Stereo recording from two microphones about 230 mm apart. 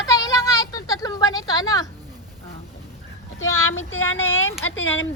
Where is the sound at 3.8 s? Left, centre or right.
Left.